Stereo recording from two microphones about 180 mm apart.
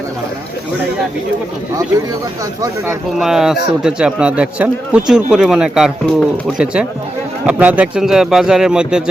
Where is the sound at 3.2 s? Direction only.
5° right (ahead or behind).